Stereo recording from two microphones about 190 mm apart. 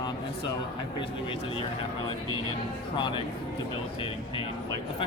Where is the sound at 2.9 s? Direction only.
25° left (ahead or behind).